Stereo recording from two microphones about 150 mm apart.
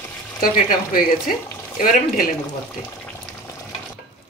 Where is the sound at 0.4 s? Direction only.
70° left (ahead or behind).